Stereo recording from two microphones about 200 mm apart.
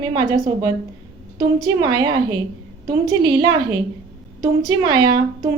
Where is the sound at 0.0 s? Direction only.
20° right (ahead or behind).